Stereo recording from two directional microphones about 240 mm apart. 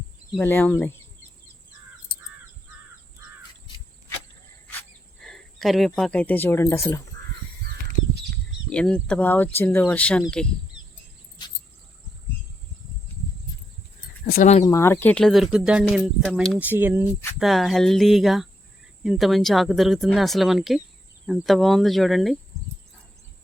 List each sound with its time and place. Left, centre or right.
0.3 s speech: centre
5.2 s speech: centre
8.7 s speech: centre
14.3 s a sound: left
14.6 s speech: centre